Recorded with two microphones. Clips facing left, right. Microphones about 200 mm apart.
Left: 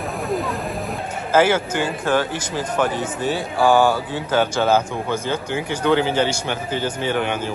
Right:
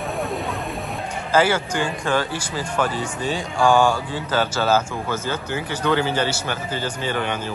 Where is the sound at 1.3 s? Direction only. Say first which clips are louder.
Left 2 dB; 10° left (ahead or behind).